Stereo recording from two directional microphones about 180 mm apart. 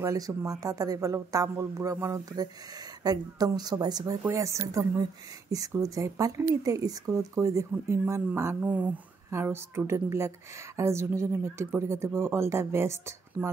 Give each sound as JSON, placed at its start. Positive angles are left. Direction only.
{"t": 0.0, "sound": "speech", "side_deg": -15}